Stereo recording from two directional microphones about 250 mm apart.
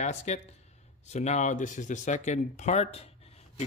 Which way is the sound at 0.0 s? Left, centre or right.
Left.